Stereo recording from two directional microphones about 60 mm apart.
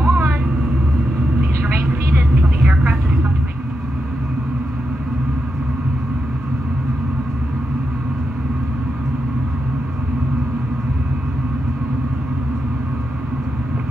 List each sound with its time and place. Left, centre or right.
0.0 s vehicle: right
1.4 s vehicle: right